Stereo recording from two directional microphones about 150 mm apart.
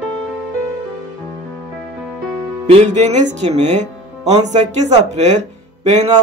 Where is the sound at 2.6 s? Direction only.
45° right (ahead or behind).